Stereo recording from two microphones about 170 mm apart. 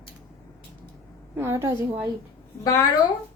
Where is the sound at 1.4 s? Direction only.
15° right (ahead or behind).